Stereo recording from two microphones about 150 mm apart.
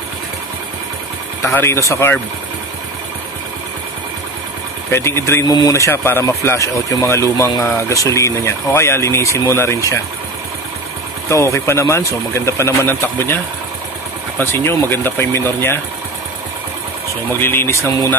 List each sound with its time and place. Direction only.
1.4 s speech: 15° left (ahead or behind)
4.9 s speech: 15° left (ahead or behind)
11.2 s speech: 20° left (ahead or behind)
14.4 s speech: 15° left (ahead or behind)
17.3 s speech: 15° left (ahead or behind)